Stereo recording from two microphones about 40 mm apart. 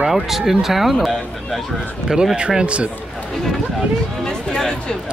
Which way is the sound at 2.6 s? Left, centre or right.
Right.